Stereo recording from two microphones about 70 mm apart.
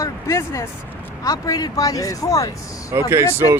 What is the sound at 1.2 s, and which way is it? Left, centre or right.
Speech, left.